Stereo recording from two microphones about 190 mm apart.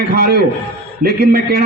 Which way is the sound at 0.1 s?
55° right (ahead or behind).